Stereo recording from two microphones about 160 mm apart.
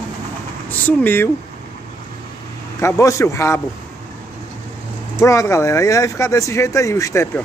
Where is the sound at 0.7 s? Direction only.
10° left (ahead or behind).